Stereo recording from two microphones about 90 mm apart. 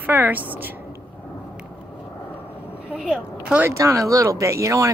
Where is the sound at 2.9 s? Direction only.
10° right (ahead or behind).